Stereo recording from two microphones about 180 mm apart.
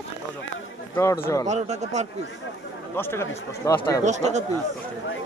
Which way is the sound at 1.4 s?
40° right (ahead or behind).